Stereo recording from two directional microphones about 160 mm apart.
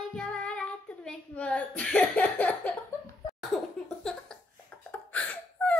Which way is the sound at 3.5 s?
5° left (ahead or behind).